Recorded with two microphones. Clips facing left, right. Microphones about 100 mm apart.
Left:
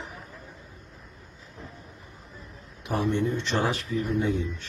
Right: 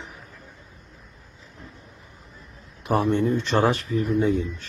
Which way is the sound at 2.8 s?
45° right (ahead or behind).